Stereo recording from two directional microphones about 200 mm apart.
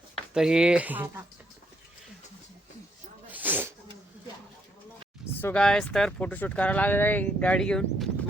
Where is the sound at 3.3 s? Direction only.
10° right (ahead or behind).